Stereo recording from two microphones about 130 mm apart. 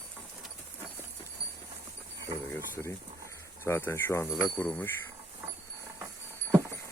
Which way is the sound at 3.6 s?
20° left (ahead or behind).